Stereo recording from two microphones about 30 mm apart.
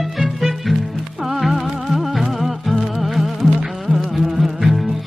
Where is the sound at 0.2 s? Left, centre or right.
Centre.